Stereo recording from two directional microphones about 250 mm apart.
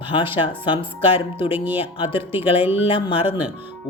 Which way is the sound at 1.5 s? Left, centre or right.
Centre.